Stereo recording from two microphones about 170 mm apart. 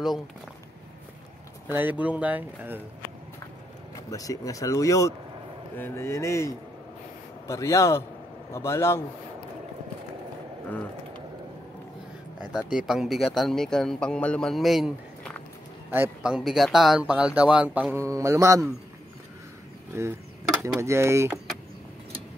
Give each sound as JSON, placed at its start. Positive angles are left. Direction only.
{"t": 1.7, "sound": "speech", "side_deg": -10}
{"t": 3.9, "sound": "speech", "side_deg": 20}
{"t": 12.4, "sound": "speech", "side_deg": -5}
{"t": 19.9, "sound": "speech", "side_deg": -15}